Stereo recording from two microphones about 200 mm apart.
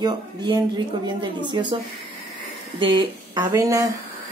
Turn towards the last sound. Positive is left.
turn(degrees=-15)  # may be behind; listen again after turning